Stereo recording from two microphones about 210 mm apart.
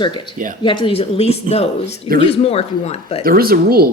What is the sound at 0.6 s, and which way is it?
Speech, 25° left (ahead or behind).